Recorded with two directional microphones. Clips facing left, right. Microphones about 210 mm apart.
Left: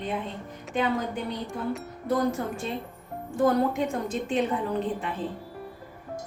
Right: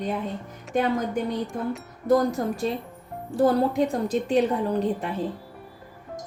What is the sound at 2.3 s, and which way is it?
A woman's voice, 40° right (ahead or behind).